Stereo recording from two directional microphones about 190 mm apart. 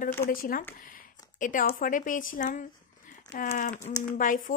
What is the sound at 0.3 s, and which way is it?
Speech, 50° left (ahead or behind).